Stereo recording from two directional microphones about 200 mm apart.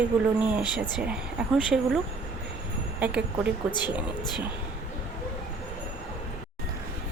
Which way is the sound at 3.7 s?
20° left (ahead or behind).